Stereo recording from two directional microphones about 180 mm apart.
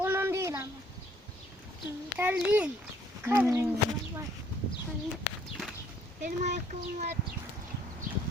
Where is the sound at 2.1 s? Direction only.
10° right (ahead or behind).